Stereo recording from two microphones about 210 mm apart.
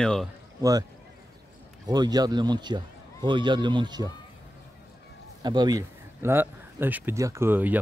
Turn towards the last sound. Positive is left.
turn(degrees=-10)  # may be behind; listen again after turning